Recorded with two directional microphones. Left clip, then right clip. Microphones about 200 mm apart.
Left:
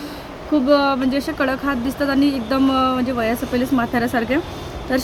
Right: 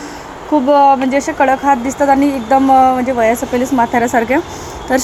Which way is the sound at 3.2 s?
10° left (ahead or behind).